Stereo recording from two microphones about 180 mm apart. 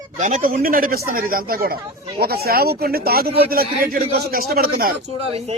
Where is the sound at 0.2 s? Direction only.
45° right (ahead or behind).